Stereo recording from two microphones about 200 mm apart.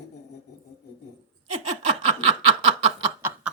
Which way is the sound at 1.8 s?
30° right (ahead or behind).